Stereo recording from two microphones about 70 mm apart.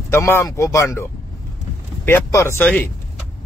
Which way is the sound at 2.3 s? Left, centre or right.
Left.